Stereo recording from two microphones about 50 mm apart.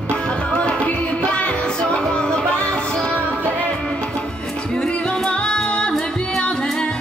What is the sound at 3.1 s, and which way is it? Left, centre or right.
Music, right.